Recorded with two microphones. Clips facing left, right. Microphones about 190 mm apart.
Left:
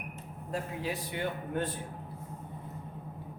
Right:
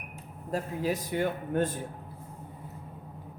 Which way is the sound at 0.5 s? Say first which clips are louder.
Right 5 dB; 40° right (ahead or behind).